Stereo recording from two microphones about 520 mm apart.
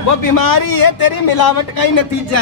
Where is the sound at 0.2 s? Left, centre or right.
Left.